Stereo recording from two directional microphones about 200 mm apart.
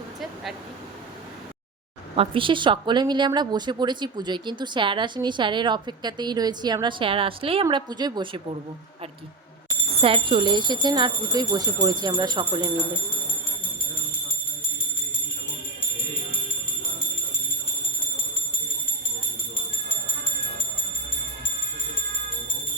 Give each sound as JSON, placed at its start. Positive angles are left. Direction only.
{"t": 2.1, "sound": "a woman's voice", "side_deg": -25}
{"t": 10.0, "sound": "a woman's voice", "side_deg": -25}